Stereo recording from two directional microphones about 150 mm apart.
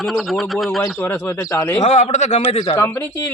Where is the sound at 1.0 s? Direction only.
15° left (ahead or behind).